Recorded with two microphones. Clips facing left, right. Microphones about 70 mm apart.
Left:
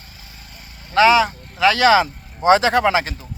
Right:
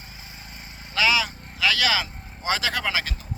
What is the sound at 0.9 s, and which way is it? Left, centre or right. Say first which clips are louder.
Speech: left 10 dB; left.